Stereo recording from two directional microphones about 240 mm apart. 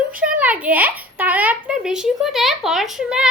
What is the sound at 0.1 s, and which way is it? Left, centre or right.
A child's voice, centre.